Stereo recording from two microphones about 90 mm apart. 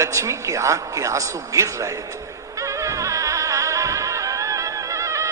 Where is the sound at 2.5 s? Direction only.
35° right (ahead or behind).